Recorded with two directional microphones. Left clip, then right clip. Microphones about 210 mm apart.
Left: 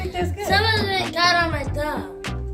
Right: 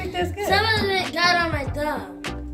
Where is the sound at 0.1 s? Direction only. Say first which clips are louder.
Right 2 dB; 20° right (ahead or behind).